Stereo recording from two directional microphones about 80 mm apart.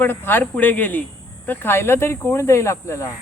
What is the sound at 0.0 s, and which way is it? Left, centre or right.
Speech, left.